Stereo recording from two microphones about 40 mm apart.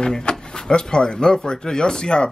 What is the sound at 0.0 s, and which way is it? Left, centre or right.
Speech, left.